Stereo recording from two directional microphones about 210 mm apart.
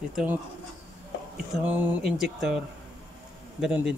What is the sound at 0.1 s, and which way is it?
Speech, 5° right (ahead or behind).